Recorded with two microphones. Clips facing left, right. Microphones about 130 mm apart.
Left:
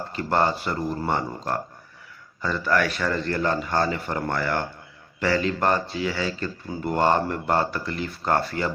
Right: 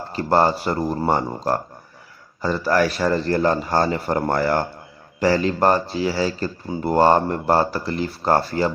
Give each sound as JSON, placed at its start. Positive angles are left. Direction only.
{"t": 0.1, "sound": "a man's voice", "side_deg": -35}